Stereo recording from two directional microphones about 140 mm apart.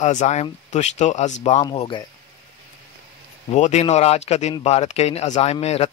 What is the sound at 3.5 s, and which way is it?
Speech, 55° left (ahead or behind).